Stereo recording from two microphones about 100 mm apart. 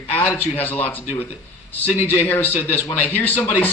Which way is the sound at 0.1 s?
20° left (ahead or behind).